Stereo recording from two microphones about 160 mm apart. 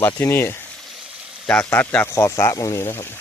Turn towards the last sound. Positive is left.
turn(degrees=15)  # may be behind; listen again after turning